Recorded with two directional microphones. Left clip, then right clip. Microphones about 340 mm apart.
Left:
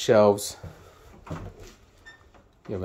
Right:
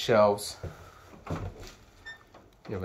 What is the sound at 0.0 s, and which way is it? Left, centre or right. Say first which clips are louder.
Speech: left 4 dB; left.